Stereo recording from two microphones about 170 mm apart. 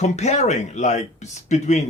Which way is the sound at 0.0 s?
40° left (ahead or behind).